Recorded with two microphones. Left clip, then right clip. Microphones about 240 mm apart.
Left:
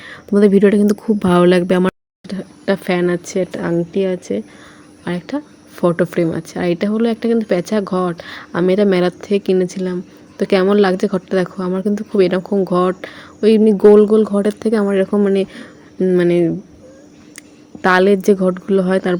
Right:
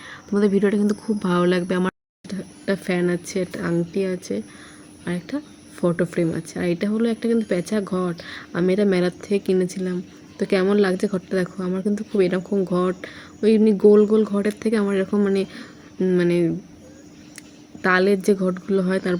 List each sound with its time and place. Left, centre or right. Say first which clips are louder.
0.0 s speech: left 8 dB; left
2.2 s a woman's voice: left 7 dB; centre
17.8 s a woman's voice: left 6 dB; centre